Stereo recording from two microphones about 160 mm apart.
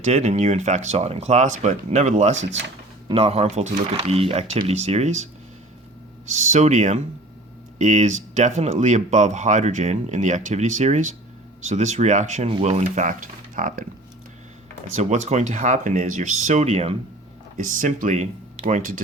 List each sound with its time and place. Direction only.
0.0 s speech: 45° right (ahead or behind)
14.9 s speech: 50° right (ahead or behind)
17.6 s speech: 55° right (ahead or behind)